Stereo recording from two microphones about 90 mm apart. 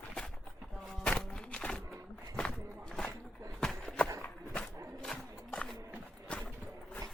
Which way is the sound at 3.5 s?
5° left (ahead or behind).